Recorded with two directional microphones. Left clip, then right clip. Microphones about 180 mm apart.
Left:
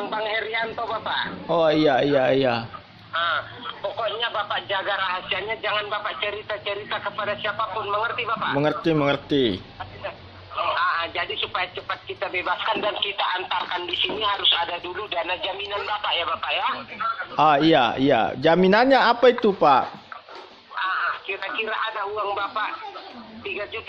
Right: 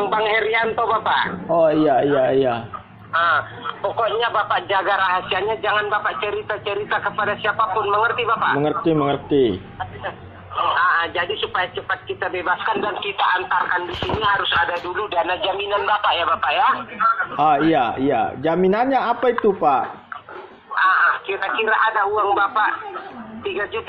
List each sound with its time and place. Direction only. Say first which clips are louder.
0.0 s a man's voice: right 7 dB; 15° right (ahead or behind)
1.5 s speech: right 3 dB; 40° left (ahead or behind)
3.1 s speech: right 6 dB; 15° right (ahead or behind)
8.5 s speech: right 3 dB; 35° left (ahead or behind)
9.8 s speech: right 5 dB; centre (ahead or behind)
14.3 s speech: right 3 dB; 35° left (ahead or behind)
14.9 s speech: right 6 dB; 15° left (ahead or behind)
15.1 s speech: right 6 dB; centre (ahead or behind)
17.4 s a man's voice: left 1 dB; 45° left (ahead or behind)
20.7 s speech: right 9 dB; 5° right (ahead or behind)